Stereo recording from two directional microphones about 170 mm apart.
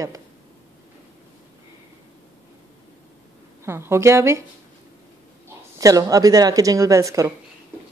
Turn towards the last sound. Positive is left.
turn(degrees=-20)  # may be behind; listen again after turning